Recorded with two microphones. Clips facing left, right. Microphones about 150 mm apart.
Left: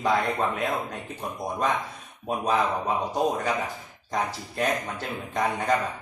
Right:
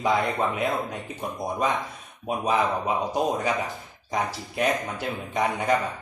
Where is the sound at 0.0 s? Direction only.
5° right (ahead or behind).